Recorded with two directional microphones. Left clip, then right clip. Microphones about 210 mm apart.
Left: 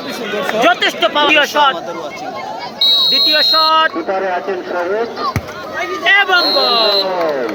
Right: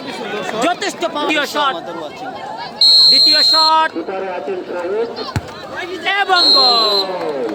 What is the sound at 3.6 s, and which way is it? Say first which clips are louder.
Speech: left 1 dB; 25° right (ahead or behind).